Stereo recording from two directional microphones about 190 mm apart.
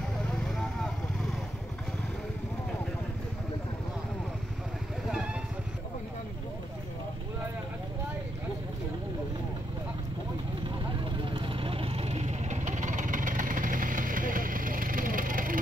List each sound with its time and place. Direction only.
0.3 s vehicle: centre (ahead or behind)
11.2 s vehicle: 25° right (ahead or behind); by 15.6 s 45° right (ahead or behind)